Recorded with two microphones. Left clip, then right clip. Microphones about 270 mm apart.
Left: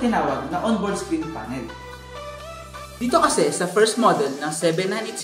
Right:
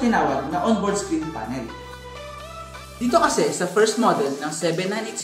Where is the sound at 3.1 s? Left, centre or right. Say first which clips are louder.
Even; left.